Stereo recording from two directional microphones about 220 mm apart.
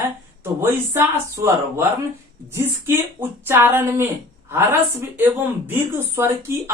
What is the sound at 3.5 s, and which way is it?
Speech, 10° right (ahead or behind).